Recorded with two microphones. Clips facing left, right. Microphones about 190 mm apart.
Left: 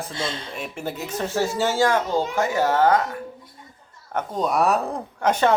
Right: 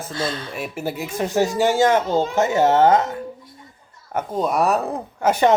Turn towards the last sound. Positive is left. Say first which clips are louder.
# right 3 dB
turn(degrees=-5)  # may be behind; listen again after turning